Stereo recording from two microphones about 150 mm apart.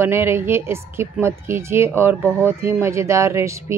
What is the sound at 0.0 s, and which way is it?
Speech, 15° right (ahead or behind).